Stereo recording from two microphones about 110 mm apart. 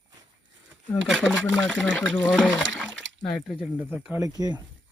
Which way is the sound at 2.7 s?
5° left (ahead or behind).